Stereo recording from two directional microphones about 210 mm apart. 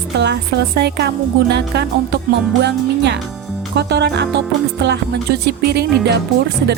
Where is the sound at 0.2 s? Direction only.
55° right (ahead or behind).